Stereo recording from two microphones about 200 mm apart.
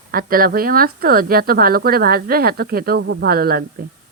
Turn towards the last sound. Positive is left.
turn(degrees=-50)  # may be behind; listen again after turning